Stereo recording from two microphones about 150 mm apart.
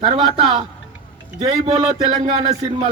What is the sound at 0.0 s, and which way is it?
A man's voice, 35° right (ahead or behind).